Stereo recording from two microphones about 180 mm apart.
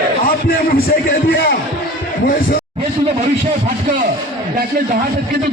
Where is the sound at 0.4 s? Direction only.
55° left (ahead or behind).